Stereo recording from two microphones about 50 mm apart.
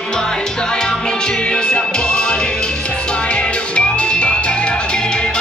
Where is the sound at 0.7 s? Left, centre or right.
Centre.